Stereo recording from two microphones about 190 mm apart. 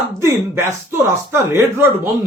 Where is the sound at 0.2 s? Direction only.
15° right (ahead or behind).